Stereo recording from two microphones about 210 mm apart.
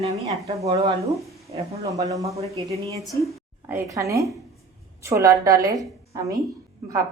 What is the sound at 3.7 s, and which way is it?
Speech, 15° right (ahead or behind).